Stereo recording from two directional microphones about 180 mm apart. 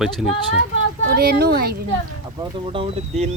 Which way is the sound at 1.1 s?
60° right (ahead or behind).